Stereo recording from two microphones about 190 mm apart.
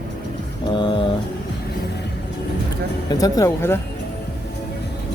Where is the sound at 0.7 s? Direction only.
25° left (ahead or behind).